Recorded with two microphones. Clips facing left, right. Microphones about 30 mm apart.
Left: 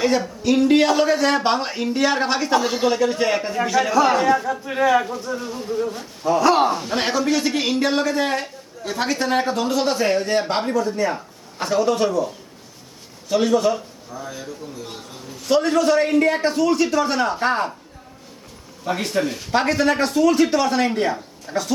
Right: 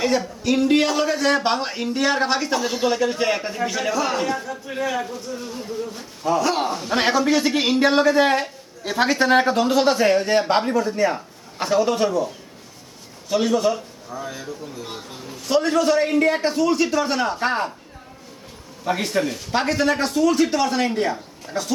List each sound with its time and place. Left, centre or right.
0.0 s a man's voice: centre
4.4 s a man's voice: centre
5.4 s a man's voice: centre
6.9 s a man's voice: centre
14.1 s a man's voice: centre
15.4 s speech: centre
18.9 s speech: centre